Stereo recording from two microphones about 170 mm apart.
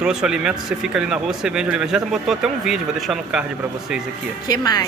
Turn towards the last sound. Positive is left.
turn(degrees=20)  # may be behind; listen again after turning